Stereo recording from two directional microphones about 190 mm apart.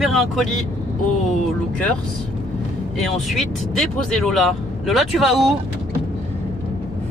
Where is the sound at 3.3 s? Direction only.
Centre (ahead or behind).